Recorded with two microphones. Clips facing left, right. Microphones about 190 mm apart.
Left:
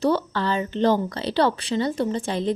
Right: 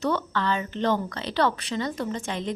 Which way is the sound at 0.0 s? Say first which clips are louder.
Left 4 dB; 35° left (ahead or behind).